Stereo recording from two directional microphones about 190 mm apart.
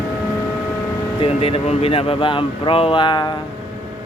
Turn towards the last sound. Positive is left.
turn(degrees=25)  # may be behind; listen again after turning